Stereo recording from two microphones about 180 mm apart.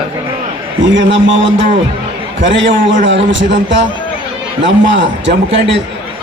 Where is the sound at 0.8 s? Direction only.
90° right.